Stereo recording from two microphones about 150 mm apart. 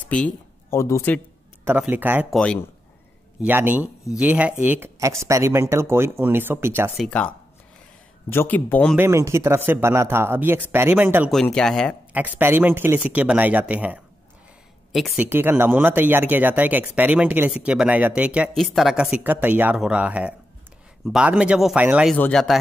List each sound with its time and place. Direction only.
0.0 s a sound: 10° left (ahead or behind)
0.7 s speech: 20° left (ahead or behind)
1.6 s speech: 15° right (ahead or behind)
2.3 s speech: 5° left (ahead or behind)
3.4 s speech: 10° right (ahead or behind)
7.0 s speech: 5° left (ahead or behind)
8.3 s speech: 15° left (ahead or behind)
8.9 s speech: 20° right (ahead or behind)
11.3 s speech: 5° left (ahead or behind)
12.1 s speech: 10° right (ahead or behind)
14.9 s speech: centre (ahead or behind)
15.1 s speech: 15° right (ahead or behind)
22.1 s speech: 5° left (ahead or behind)